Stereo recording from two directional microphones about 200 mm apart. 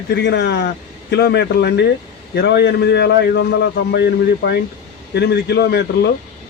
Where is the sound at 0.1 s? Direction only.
60° left (ahead or behind).